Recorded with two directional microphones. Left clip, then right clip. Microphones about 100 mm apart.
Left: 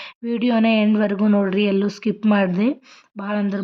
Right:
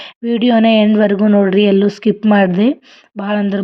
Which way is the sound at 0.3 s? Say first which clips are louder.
Right 7 dB; 35° right (ahead or behind).